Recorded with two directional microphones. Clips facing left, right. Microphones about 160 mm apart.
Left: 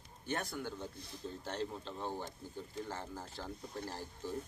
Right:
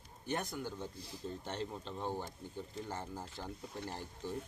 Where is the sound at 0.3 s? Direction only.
15° right (ahead or behind).